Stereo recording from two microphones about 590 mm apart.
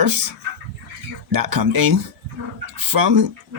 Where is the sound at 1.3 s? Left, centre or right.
Right.